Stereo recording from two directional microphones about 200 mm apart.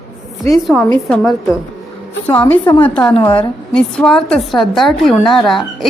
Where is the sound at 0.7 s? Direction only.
5° left (ahead or behind).